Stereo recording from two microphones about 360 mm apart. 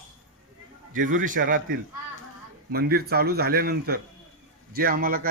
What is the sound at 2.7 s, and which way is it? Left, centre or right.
A man's voice, right.